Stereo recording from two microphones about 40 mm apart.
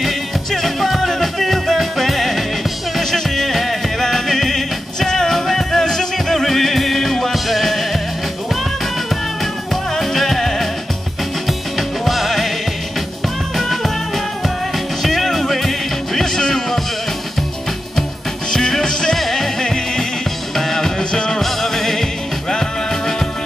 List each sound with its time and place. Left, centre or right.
0.5 s music: centre
9.9 s music: centre
12.0 s music: centre
13.6 s music: centre
18.5 s music: centre
21.1 s music: centre
21.4 s music: centre